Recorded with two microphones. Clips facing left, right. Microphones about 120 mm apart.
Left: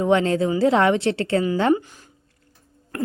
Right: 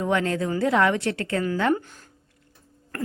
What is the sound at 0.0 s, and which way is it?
Speech, 25° left (ahead or behind).